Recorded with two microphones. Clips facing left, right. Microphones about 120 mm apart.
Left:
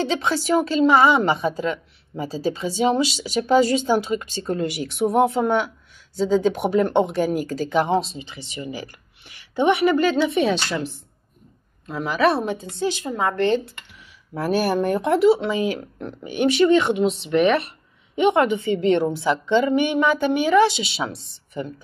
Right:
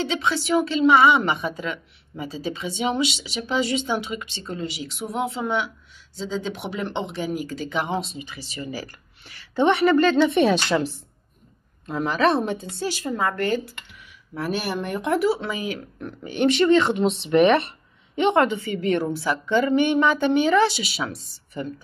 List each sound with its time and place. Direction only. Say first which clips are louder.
0.0 s a woman's voice: left 2 dB; 40° left (ahead or behind)
4.6 s a woman's voice: left 6 dB; 55° left (ahead or behind); by 10.5 s 5° left (ahead or behind)
11.9 s a woman's voice: left 1 dB; 5° left (ahead or behind); by 13.6 s 20° left (ahead or behind)
14.3 s a woman's voice: left 6 dB; 40° left (ahead or behind)
16.2 s a woman's voice: left 2 dB; 10° left (ahead or behind)
17.0 s speech: right 1 dB; centre (ahead or behind)
18.1 s a woman's voice: left 1 dB; 15° left (ahead or behind)
20.8 s a woman's voice: left 2 dB; 25° left (ahead or behind)